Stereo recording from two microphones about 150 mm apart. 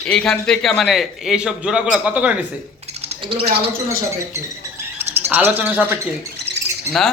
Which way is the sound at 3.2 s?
40° right (ahead or behind).